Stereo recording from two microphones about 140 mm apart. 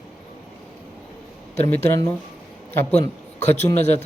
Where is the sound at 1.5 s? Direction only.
50° left (ahead or behind).